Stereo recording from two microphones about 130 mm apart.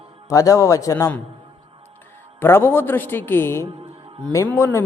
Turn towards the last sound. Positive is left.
turn(degrees=20)  # may be behind; listen again after turning